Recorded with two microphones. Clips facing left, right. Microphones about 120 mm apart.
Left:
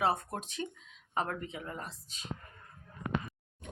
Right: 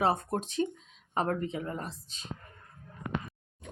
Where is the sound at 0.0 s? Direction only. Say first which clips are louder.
Right 3 dB; 25° right (ahead or behind).